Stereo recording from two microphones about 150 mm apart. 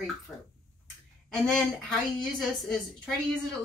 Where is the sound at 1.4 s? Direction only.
Centre (ahead or behind).